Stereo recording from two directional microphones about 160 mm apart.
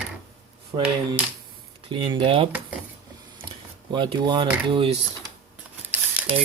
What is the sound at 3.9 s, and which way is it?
Speech, 25° right (ahead or behind).